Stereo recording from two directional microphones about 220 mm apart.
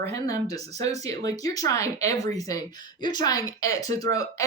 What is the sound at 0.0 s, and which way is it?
Speech, 15° left (ahead or behind).